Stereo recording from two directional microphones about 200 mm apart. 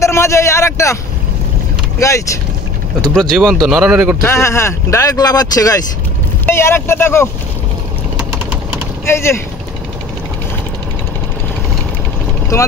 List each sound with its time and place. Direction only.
0.0 s a sound: 15° left (ahead or behind)
2.0 s speech: 15° left (ahead or behind)
3.0 s speech: centre (ahead or behind)
4.2 s speech: 10° left (ahead or behind)
9.0 s speech: 15° left (ahead or behind)